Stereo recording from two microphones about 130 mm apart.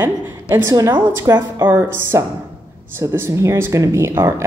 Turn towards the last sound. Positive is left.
turn(degrees=-20)  # may be behind; listen again after turning